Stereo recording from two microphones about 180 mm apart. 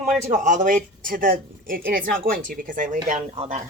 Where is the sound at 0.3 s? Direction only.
45° right (ahead or behind).